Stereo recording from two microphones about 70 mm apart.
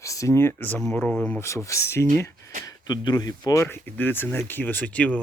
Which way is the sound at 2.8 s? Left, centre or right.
Left.